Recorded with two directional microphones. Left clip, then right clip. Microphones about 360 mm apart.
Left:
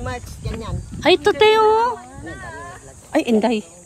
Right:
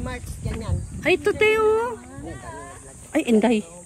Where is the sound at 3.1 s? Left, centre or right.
Centre.